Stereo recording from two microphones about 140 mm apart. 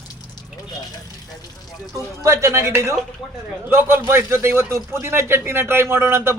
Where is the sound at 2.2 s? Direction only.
20° right (ahead or behind).